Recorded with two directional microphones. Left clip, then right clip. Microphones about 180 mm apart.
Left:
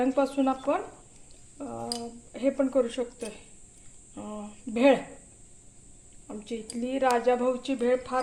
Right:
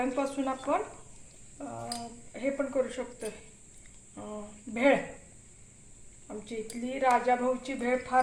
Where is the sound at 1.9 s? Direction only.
50° left (ahead or behind).